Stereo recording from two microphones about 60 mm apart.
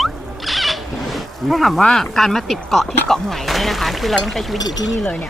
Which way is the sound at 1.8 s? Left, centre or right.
Centre.